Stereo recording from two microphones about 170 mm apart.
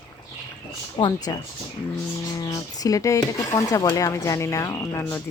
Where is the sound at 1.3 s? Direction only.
20° left (ahead or behind).